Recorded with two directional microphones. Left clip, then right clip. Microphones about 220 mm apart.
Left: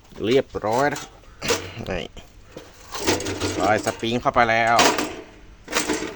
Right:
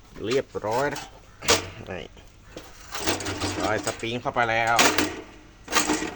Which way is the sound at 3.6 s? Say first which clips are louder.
Left 7 dB; 50° left (ahead or behind).